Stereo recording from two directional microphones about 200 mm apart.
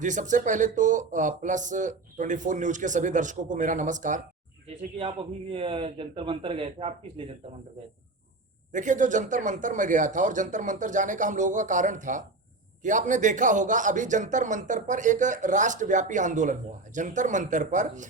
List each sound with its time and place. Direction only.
0.0 s a man's voice: 40° right (ahead or behind)
4.9 s a man's voice: 25° right (ahead or behind)
8.7 s a man's voice: 40° right (ahead or behind)